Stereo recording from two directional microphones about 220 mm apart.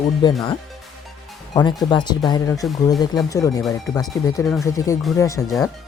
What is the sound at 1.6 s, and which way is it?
Speech, 20° left (ahead or behind).